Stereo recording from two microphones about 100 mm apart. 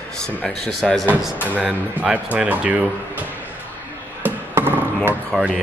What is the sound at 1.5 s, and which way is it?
Speech, 10° right (ahead or behind).